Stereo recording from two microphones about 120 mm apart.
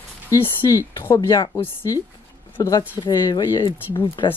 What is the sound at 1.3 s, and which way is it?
Speech, 35° left (ahead or behind).